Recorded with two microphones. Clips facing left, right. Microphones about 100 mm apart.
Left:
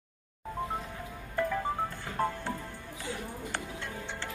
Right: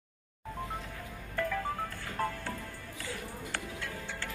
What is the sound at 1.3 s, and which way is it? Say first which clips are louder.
Music: left 3 dB; 15° left (ahead or behind).